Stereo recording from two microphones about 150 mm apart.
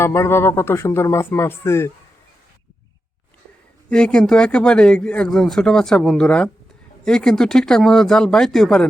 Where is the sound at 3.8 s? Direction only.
5° left (ahead or behind).